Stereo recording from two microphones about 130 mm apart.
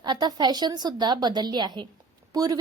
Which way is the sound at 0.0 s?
35° right (ahead or behind).